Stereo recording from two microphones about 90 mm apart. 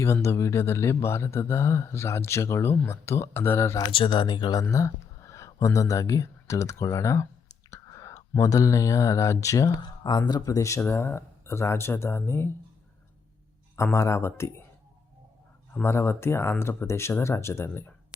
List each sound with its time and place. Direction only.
0.0 s speech: 30° left (ahead or behind)
3.9 s speech: 60° left (ahead or behind)
4.7 s speech: 35° left (ahead or behind)
7.7 s whispering: 40° left (ahead or behind)
8.4 s speech: 40° left (ahead or behind)
9.8 s speech: 50° left (ahead or behind)
10.8 s speech: 25° left (ahead or behind)
13.7 s speech: 30° left (ahead or behind)
15.7 s speech: 25° left (ahead or behind)